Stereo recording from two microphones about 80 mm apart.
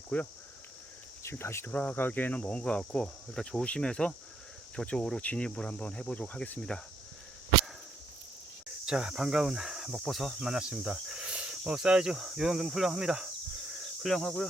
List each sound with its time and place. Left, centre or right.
0.1 s speech: centre
1.2 s speech: left
1.7 s speech: left
8.9 s speech: centre